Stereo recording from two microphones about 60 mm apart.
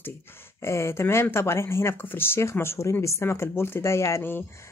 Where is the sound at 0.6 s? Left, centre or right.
Left.